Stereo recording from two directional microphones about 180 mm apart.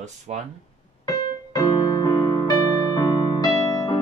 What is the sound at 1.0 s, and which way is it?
Music, 20° left (ahead or behind).